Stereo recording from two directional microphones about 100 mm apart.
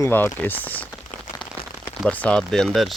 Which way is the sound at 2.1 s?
15° left (ahead or behind).